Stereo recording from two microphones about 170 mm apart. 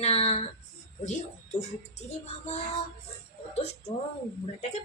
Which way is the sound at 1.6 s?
40° left (ahead or behind).